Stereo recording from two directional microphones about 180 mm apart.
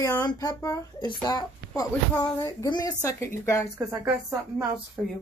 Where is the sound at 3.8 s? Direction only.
20° right (ahead or behind).